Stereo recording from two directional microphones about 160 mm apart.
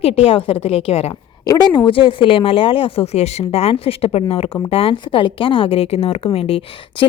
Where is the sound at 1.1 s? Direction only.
25° left (ahead or behind).